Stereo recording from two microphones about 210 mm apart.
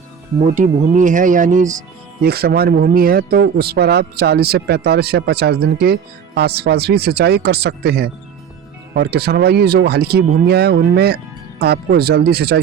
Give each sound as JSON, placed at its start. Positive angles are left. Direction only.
{"t": 0.3, "sound": "speech", "side_deg": -35}
{"t": 2.2, "sound": "speech", "side_deg": -50}